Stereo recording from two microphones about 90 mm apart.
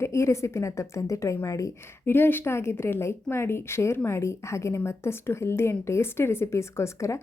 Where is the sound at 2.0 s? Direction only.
25° left (ahead or behind).